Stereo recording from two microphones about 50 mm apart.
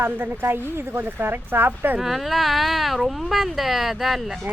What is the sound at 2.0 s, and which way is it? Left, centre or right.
Speech, centre.